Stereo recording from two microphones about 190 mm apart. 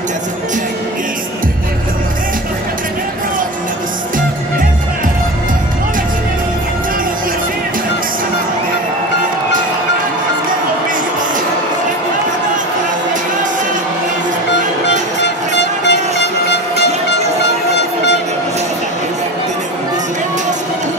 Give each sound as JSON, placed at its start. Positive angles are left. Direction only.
{"t": 15.2, "sound": "vehicle", "side_deg": 65}
{"t": 17.7, "sound": "train", "side_deg": 65}